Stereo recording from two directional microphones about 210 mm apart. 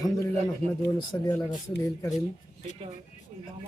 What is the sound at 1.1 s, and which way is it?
Speech, 15° left (ahead or behind).